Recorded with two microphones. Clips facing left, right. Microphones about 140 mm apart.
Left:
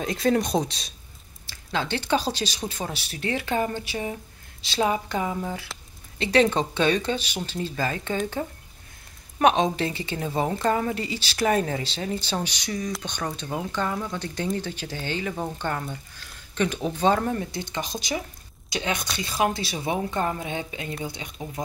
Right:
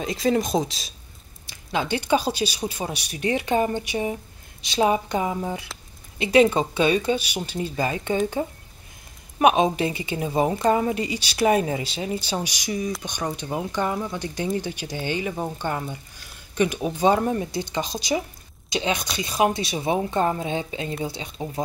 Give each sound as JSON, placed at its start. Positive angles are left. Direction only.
{"t": 0.0, "sound": "speech", "side_deg": 0}
{"t": 1.5, "sound": "speech", "side_deg": -15}
{"t": 9.4, "sound": "speech", "side_deg": -10}
{"t": 13.7, "sound": "speech", "side_deg": -15}